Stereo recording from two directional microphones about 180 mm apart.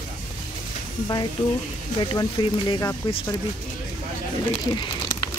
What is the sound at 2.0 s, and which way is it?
Speech, 25° left (ahead or behind).